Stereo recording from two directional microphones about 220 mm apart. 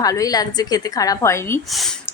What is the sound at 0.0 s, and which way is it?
A woman's voice, 15° left (ahead or behind).